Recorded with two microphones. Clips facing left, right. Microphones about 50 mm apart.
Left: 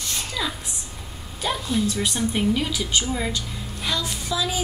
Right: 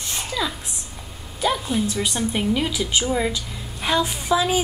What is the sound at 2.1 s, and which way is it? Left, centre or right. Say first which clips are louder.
A woman's voice: even; centre.